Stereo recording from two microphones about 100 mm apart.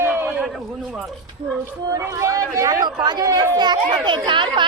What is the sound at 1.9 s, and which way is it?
Speech, 35° right (ahead or behind).